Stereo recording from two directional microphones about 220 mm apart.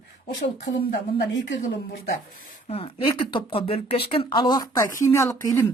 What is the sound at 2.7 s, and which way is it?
Speech, 25° left (ahead or behind).